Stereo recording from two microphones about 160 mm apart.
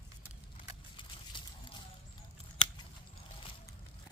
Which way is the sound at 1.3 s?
30° left (ahead or behind).